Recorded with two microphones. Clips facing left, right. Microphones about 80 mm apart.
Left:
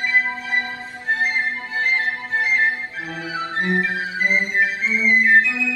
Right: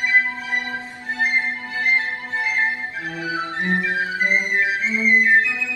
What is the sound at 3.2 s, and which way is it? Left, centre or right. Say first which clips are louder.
Music: left 1 dB; right.